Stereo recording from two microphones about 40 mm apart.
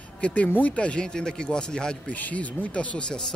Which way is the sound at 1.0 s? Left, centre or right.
Centre.